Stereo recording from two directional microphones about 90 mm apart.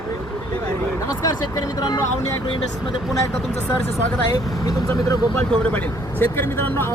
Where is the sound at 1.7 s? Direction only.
50° left (ahead or behind).